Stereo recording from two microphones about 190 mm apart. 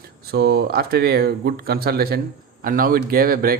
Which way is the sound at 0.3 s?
60° right (ahead or behind).